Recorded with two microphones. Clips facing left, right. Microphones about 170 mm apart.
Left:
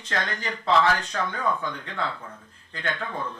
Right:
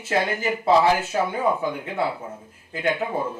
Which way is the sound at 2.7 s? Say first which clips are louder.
Right 7 dB; 10° right (ahead or behind).